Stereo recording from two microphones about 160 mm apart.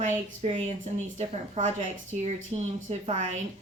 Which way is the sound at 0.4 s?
45° right (ahead or behind).